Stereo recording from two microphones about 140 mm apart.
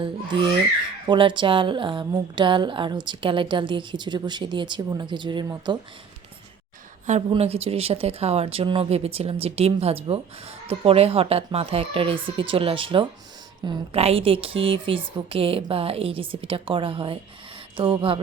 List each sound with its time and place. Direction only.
0.0 s a woman's voice: 35° right (ahead or behind)
7.3 s a woman's voice: 45° right (ahead or behind)